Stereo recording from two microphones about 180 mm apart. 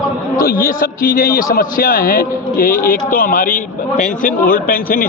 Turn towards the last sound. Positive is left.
turn(degrees=50)  # may be behind; listen again after turning